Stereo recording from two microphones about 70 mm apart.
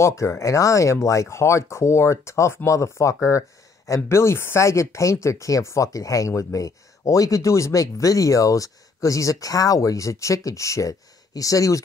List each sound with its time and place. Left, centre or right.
0.0 s speech: left